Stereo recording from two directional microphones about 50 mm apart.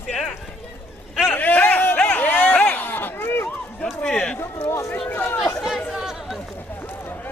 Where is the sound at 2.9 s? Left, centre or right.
Left.